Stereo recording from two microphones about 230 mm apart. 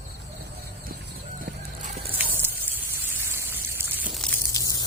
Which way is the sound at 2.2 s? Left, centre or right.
Centre.